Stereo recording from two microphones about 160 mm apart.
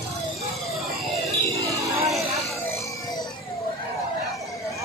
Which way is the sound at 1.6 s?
20° right (ahead or behind).